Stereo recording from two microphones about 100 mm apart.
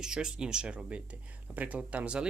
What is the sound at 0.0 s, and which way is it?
Speech, 5° right (ahead or behind).